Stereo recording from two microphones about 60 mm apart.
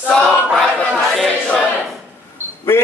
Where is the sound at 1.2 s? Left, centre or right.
Centre.